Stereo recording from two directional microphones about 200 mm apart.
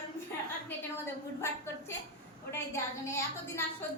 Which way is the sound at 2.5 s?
15° left (ahead or behind).